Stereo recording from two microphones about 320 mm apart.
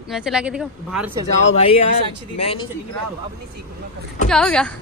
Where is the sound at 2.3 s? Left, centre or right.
Centre.